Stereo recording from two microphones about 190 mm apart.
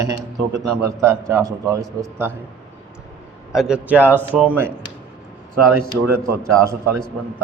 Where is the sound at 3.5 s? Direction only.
5° right (ahead or behind).